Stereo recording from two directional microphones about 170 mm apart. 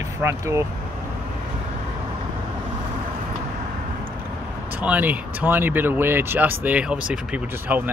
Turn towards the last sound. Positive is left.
turn(degrees=-5)  # may be behind; listen again after turning